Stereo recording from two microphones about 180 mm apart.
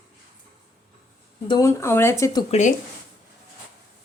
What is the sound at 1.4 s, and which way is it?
Speech, 20° left (ahead or behind).